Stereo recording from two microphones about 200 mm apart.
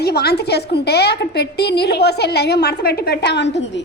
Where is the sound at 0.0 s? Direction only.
55° left (ahead or behind).